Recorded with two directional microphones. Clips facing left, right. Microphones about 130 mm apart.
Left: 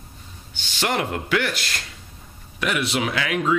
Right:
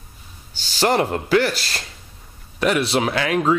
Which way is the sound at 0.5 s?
35° right (ahead or behind).